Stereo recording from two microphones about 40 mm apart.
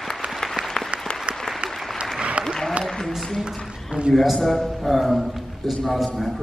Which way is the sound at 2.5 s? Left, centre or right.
Centre.